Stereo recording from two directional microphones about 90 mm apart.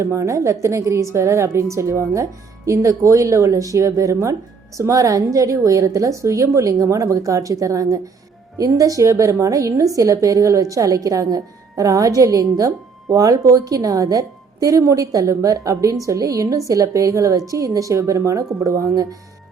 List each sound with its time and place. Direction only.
0.0 s a woman's voice: 35° right (ahead or behind)